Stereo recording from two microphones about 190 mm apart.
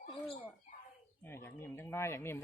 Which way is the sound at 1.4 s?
10° left (ahead or behind).